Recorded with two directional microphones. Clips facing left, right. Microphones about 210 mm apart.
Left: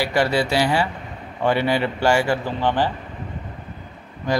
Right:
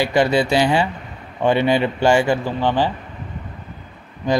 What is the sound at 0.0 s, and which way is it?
Speech, 20° right (ahead or behind).